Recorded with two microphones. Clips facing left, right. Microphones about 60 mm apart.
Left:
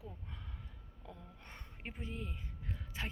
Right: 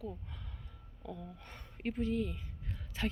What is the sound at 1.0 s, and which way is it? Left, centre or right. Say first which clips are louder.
Speech: right 8 dB; right.